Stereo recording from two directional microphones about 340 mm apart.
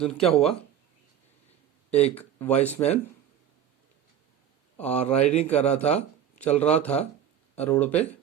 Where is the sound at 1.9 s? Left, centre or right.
Centre.